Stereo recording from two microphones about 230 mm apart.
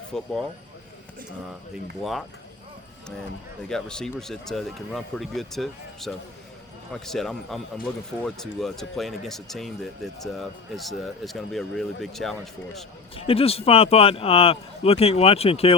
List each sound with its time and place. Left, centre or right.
0.1 s speech: centre
3.7 s speech: centre
13.1 s speech: left